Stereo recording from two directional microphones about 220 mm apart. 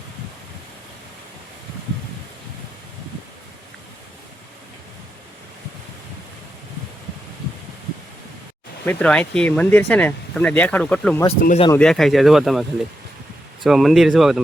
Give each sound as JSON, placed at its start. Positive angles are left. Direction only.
{"t": 8.8, "sound": "speech", "side_deg": 5}
{"t": 11.3, "sound": "speech", "side_deg": 25}
{"t": 11.7, "sound": "speech", "side_deg": 5}
{"t": 13.7, "sound": "speech", "side_deg": 0}